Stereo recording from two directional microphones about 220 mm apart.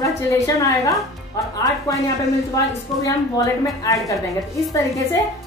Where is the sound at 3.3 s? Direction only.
15° left (ahead or behind).